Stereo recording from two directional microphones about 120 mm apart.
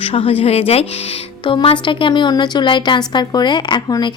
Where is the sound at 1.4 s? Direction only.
45° left (ahead or behind).